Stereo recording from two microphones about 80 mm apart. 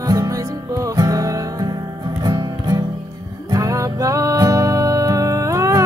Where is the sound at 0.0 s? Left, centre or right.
Right.